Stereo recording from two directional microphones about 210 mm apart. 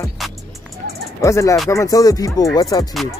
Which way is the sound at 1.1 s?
15° left (ahead or behind).